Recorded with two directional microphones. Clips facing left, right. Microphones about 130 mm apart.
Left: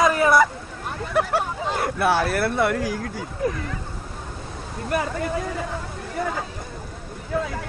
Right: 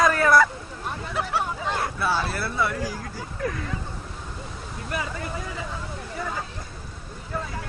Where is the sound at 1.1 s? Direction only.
55° left (ahead or behind).